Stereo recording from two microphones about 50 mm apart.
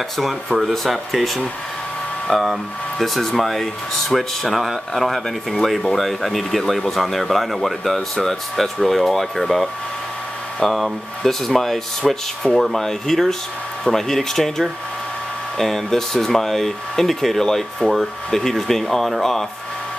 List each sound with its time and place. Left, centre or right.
0.2 s speech: centre